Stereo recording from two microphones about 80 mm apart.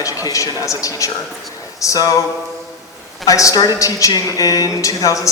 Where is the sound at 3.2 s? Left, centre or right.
Left.